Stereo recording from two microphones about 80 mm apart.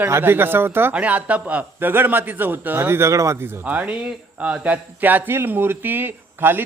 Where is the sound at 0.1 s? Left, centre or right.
Right.